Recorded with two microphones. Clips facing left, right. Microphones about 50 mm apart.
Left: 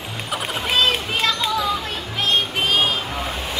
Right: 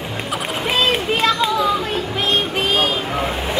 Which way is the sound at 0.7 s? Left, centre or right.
Centre.